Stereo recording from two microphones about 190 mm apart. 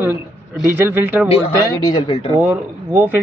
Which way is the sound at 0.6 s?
10° right (ahead or behind).